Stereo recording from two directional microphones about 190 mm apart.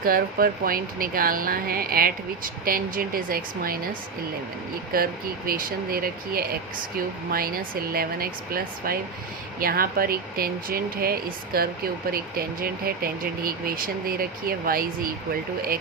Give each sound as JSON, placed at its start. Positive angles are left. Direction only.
{"t": 0.0, "sound": "speech", "side_deg": -50}
{"t": 5.5, "sound": "speech", "side_deg": -50}